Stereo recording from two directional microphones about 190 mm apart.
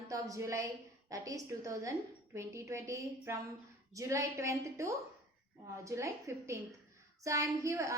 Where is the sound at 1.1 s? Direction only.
20° right (ahead or behind).